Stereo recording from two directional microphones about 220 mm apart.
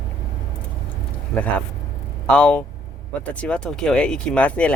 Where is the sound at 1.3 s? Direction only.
Centre (ahead or behind).